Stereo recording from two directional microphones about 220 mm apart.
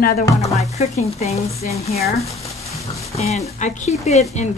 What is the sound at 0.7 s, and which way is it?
Speech, 30° left (ahead or behind).